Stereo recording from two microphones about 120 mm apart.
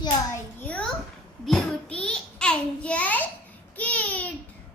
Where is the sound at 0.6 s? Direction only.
10° left (ahead or behind).